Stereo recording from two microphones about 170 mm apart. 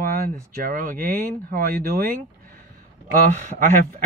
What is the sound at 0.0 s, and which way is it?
Speech, 60° right (ahead or behind).